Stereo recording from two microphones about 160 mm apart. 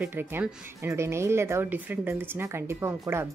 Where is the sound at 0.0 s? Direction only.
15° right (ahead or behind).